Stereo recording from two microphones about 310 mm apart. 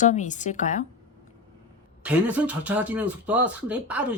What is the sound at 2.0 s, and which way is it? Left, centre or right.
Speech, centre.